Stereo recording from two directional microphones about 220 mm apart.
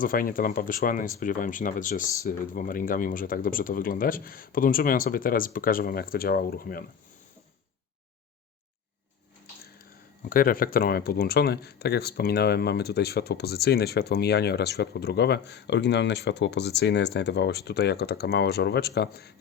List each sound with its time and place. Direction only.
0.0 s speech: 40° left (ahead or behind)
10.2 s speech: 40° left (ahead or behind)